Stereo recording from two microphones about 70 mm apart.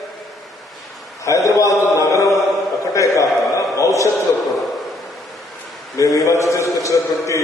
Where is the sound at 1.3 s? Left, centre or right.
Left.